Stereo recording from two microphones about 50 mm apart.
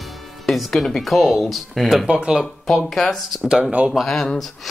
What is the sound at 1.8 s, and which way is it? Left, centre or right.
Speech, centre.